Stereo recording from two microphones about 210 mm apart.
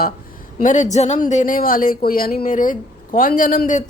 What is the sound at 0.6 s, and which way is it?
Speech, 35° left (ahead or behind).